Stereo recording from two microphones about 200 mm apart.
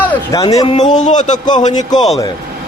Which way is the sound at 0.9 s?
35° left (ahead or behind).